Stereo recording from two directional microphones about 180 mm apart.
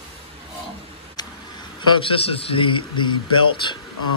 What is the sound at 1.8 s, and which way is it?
A man's voice, 30° left (ahead or behind).